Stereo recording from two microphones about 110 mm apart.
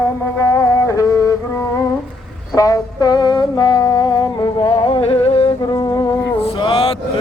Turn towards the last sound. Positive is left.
turn(degrees=50)  # may be behind; listen again after turning